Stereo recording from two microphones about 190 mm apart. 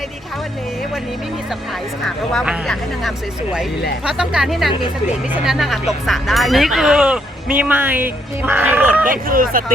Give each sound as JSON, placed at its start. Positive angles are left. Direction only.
{"t": 2.0, "sound": "speech", "side_deg": 0}
{"t": 9.0, "sound": "speech", "side_deg": -45}